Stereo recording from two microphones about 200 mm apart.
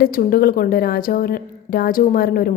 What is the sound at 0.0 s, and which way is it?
A woman's voice, 45° left (ahead or behind).